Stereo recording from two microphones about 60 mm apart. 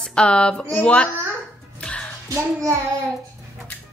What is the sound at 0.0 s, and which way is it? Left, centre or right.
A woman's voice, centre.